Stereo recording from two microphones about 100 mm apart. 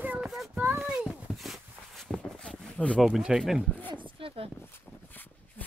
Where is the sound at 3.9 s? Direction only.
60° right (ahead or behind).